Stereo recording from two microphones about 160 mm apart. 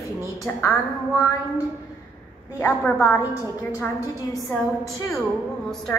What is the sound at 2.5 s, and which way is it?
A woman's voice, 15° left (ahead or behind).